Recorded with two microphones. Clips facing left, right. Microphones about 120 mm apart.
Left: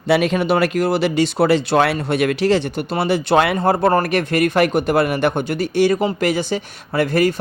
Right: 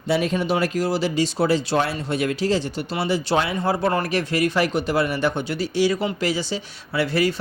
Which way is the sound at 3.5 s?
55° left (ahead or behind).